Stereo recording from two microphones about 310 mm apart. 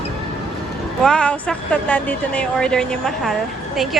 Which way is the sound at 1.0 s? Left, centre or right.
Centre.